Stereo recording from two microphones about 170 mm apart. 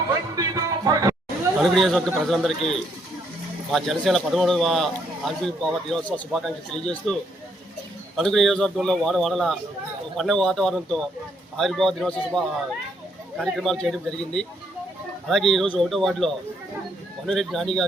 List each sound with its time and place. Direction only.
0.3 s music: 20° right (ahead or behind)
1.5 s a man's voice: centre (ahead or behind)